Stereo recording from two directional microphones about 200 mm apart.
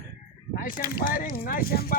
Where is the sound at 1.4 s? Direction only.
50° left (ahead or behind).